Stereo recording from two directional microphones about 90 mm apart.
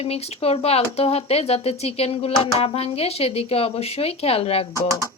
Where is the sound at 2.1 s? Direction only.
90° left.